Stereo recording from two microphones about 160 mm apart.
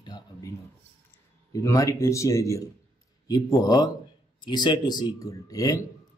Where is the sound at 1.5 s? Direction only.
20° left (ahead or behind).